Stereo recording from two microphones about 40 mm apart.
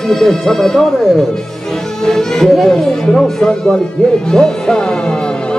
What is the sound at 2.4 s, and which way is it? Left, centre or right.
Speech, centre.